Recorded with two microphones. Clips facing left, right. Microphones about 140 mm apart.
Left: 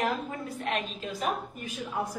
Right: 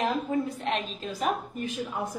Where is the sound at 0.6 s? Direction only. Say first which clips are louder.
Right 2 dB; 30° right (ahead or behind).